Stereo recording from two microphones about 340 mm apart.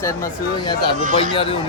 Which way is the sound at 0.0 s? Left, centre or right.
Centre.